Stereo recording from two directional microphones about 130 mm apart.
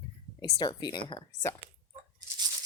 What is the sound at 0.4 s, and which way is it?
Speech, 35° left (ahead or behind).